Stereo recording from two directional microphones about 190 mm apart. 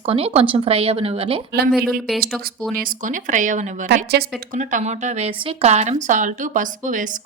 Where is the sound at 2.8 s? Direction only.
45° right (ahead or behind).